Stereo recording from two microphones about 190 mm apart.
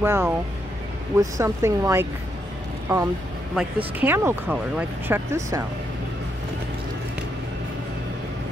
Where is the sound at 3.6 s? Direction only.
10° right (ahead or behind).